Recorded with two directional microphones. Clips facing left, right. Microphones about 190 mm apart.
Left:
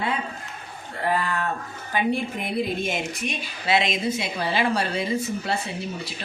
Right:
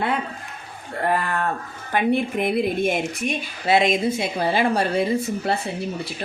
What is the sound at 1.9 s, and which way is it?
A woman's voice, 55° right (ahead or behind).